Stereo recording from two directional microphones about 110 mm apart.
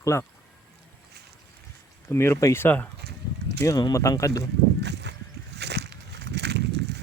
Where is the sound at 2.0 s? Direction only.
25° left (ahead or behind).